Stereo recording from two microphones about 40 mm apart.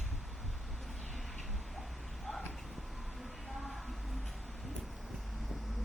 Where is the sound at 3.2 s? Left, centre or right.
Centre.